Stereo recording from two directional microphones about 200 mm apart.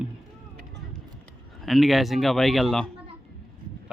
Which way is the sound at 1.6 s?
Centre (ahead or behind).